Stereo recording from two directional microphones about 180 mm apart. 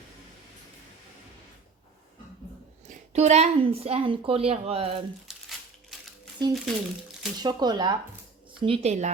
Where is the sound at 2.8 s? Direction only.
40° right (ahead or behind).